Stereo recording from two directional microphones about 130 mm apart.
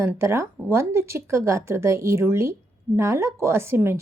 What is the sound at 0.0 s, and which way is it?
Speech, 20° right (ahead or behind).